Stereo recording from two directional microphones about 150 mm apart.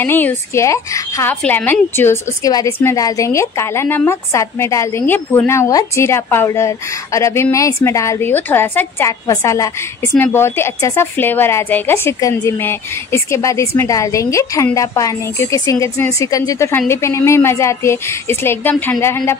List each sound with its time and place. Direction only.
0.0 s a woman's voice: 15° left (ahead or behind)